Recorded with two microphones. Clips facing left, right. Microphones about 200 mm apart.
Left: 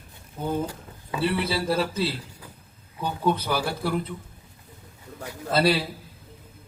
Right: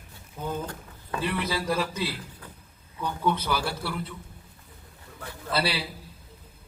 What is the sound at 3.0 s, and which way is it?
Speech, 35° left (ahead or behind).